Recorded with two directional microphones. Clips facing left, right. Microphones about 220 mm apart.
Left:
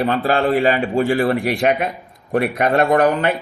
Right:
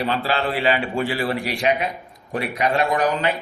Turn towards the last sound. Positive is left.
turn(degrees=55)  # may be behind; listen again after turning